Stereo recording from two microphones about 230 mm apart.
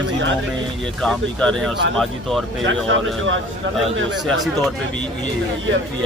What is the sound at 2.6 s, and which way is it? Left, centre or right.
Speech, right.